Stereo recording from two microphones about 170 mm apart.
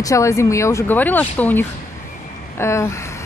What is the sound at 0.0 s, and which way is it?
Speech, 20° left (ahead or behind).